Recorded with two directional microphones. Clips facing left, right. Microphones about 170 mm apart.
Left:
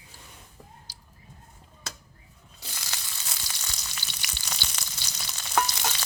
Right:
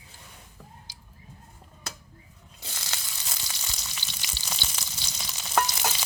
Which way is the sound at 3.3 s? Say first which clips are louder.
Right 1 dB; 5° right (ahead or behind).